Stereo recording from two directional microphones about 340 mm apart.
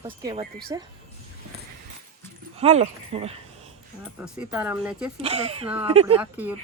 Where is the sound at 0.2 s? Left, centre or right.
Centre.